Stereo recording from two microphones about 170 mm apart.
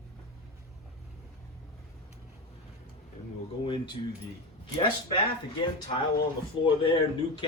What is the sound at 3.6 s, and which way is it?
Speech, 30° left (ahead or behind).